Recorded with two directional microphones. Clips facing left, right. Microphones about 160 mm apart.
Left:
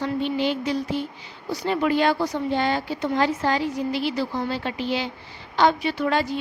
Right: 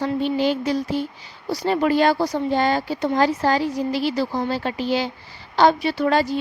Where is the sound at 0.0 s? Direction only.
40° right (ahead or behind).